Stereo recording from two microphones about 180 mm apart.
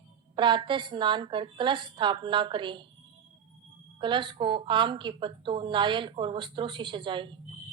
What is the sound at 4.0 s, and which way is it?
Speech, 25° right (ahead or behind).